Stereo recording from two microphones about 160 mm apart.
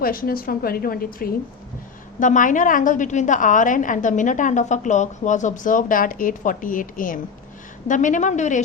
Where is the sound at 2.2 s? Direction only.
55° left (ahead or behind).